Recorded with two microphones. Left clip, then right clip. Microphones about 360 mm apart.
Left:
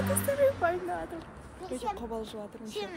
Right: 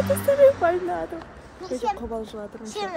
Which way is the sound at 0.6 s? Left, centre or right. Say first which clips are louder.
Right 7 dB; right.